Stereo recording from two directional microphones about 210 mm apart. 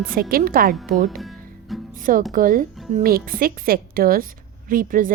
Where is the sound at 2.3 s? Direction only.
40° right (ahead or behind).